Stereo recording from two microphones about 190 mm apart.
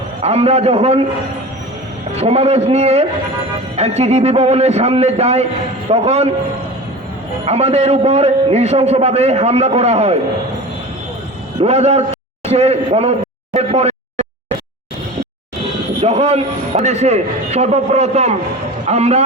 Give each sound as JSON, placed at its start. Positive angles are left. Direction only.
{"t": 0.2, "sound": "a man's voice", "side_deg": -35}
{"t": 2.1, "sound": "a man's voice", "side_deg": -35}
{"t": 7.4, "sound": "a man's voice", "side_deg": -35}
{"t": 11.6, "sound": "a man's voice", "side_deg": -35}
{"t": 16.0, "sound": "a man's voice", "side_deg": -35}